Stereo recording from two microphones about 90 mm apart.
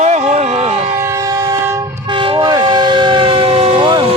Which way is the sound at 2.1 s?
70° right (ahead or behind).